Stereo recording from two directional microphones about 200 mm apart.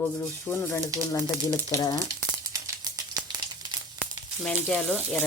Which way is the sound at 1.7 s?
20° left (ahead or behind).